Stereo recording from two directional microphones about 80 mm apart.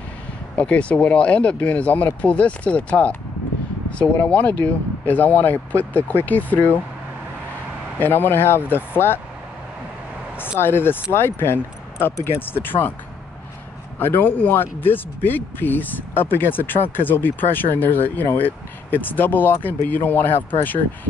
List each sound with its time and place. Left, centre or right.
0.6 s speech: centre
8.0 s speech: left
10.6 s speech: left
13.9 s speech: left